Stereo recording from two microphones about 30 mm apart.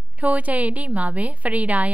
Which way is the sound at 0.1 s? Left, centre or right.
Right.